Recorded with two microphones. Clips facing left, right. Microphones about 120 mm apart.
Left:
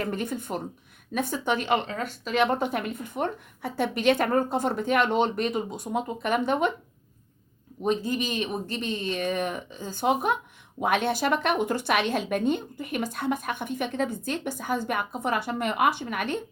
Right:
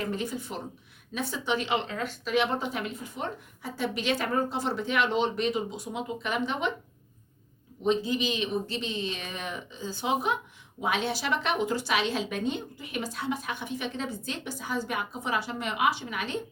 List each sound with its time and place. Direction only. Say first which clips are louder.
0.0 s a woman's voice: left 2 dB; 55° left (ahead or behind)
7.9 s a woman's voice: even; 50° left (ahead or behind)